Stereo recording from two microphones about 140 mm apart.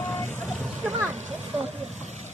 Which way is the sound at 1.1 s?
55° right (ahead or behind).